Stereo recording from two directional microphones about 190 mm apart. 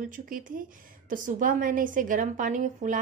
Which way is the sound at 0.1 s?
45° right (ahead or behind).